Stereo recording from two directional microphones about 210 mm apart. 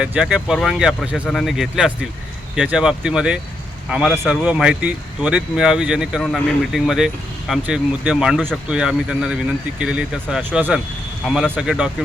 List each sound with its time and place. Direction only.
0.0 s speech: 5° right (ahead or behind)